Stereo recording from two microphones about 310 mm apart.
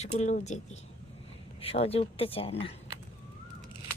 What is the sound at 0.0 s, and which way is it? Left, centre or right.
Speech, left.